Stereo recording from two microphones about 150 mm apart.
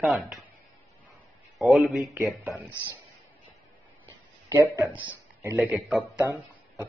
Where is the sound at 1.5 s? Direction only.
Centre (ahead or behind).